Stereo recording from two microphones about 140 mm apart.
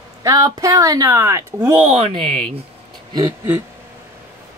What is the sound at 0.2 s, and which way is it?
Speech, 25° right (ahead or behind).